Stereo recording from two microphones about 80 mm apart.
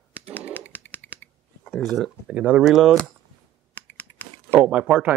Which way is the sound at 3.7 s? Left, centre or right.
Centre.